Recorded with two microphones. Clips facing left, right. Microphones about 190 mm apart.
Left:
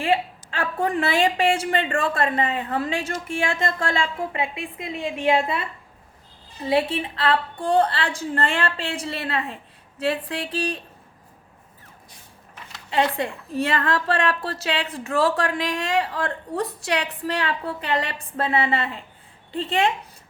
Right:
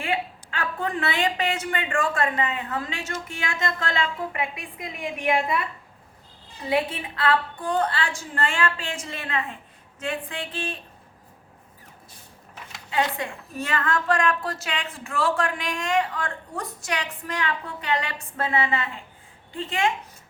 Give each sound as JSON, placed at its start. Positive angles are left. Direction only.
{"t": 0.0, "sound": "a woman's voice", "side_deg": 30}
{"t": 6.7, "sound": "a woman's voice", "side_deg": 30}
{"t": 12.9, "sound": "a woman's voice", "side_deg": 30}